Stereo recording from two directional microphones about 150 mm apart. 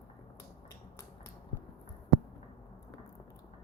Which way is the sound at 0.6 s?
20° left (ahead or behind).